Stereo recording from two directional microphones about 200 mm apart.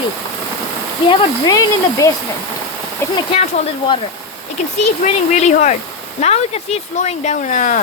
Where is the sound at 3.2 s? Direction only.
30° left (ahead or behind).